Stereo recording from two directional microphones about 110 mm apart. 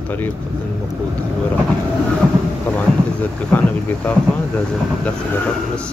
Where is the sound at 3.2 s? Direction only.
15° left (ahead or behind).